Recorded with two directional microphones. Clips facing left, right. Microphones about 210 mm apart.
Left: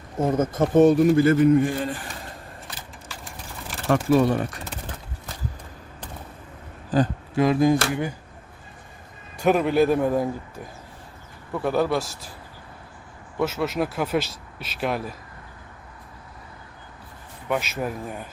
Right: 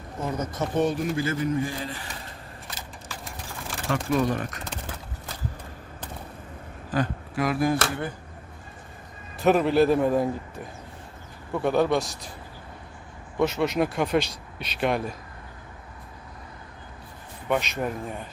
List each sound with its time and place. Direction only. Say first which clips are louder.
0.2 s a man's voice: left 8 dB; 50° left (ahead or behind)
3.9 s speech: left 5 dB; 30° left (ahead or behind)
6.9 s speech: left 5 dB; 25° left (ahead or behind)
9.4 s speech: even; centre (ahead or behind)
13.4 s speech: right 1 dB; 5° left (ahead or behind)
17.5 s speech: even; 5° left (ahead or behind)